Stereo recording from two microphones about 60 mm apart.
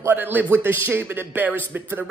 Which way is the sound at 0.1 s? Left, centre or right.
Right.